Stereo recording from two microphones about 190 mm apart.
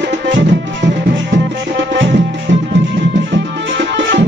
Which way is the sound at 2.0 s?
75° right (ahead or behind).